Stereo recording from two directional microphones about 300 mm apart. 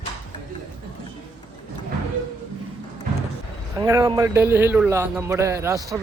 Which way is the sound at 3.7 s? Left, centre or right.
Centre.